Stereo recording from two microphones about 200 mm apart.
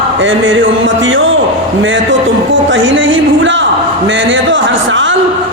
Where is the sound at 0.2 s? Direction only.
70° right (ahead or behind).